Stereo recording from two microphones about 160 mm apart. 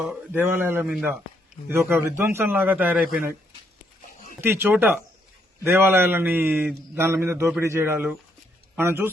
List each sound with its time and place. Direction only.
0.3 s a man's voice: 15° right (ahead or behind)
4.4 s a man's voice: 15° right (ahead or behind)